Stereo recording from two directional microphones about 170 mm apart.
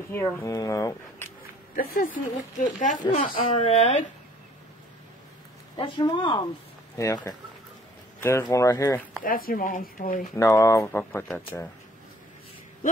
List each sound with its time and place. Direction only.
0.1 s speech: 15° left (ahead or behind)
1.8 s speech: 55° left (ahead or behind)
3.5 s speech: 40° left (ahead or behind)
5.8 s speech: 25° left (ahead or behind)
9.2 s speech: 55° left (ahead or behind)
10.3 s speech: 20° left (ahead or behind)